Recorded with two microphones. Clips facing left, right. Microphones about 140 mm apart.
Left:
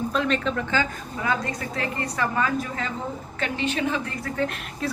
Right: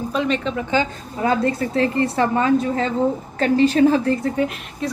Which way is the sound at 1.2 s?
30° right (ahead or behind).